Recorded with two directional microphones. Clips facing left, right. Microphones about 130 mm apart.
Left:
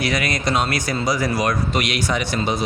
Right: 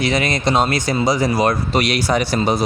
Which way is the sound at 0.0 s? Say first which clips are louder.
Right 4 dB; 25° right (ahead or behind).